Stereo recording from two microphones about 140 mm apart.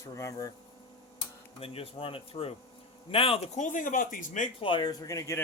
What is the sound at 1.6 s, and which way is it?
Speech, 45° left (ahead or behind).